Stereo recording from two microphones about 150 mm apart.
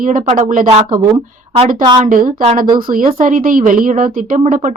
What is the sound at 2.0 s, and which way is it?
A woman's voice, 60° right (ahead or behind).